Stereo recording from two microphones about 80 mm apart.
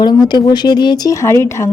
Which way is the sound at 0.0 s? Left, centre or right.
Left.